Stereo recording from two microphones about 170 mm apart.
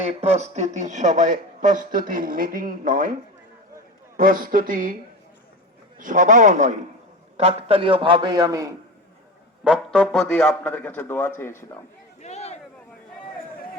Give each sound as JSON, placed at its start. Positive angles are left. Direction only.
{"t": 0.0, "sound": "speech", "side_deg": -40}
{"t": 4.2, "sound": "speech", "side_deg": -55}
{"t": 6.0, "sound": "a man's voice", "side_deg": -50}
{"t": 9.6, "sound": "a man's voice", "side_deg": 0}
{"t": 12.2, "sound": "a sound", "side_deg": 40}